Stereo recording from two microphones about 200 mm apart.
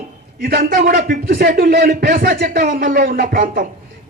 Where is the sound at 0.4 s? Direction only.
45° right (ahead or behind).